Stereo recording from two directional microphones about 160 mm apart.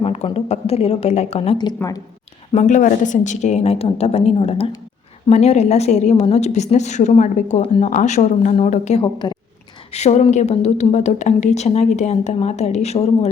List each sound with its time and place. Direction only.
0.0 s a woman's voice: 40° left (ahead or behind)
1.5 s a woman's voice: 25° left (ahead or behind)
2.5 s a woman's voice: 50° left (ahead or behind)